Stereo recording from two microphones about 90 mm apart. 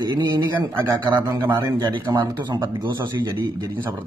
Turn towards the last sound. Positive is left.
turn(degrees=-45)  # may be behind; listen again after turning